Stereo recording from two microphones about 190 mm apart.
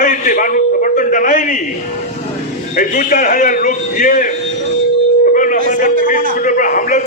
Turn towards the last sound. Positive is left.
turn(degrees=45)  # may be behind; listen again after turning